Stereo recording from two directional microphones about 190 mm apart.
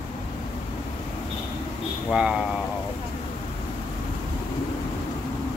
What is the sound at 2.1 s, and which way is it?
Speech, 5° right (ahead or behind).